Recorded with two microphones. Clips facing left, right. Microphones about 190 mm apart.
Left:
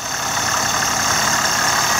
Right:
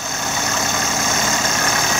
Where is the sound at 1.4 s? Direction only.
15° right (ahead or behind).